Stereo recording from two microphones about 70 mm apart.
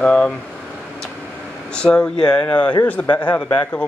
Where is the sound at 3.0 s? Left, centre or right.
Left.